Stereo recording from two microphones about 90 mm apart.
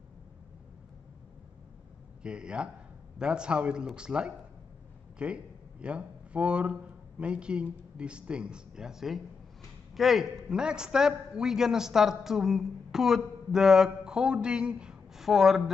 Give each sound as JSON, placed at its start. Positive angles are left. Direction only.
{"t": 2.2, "sound": "a man's voice", "side_deg": -10}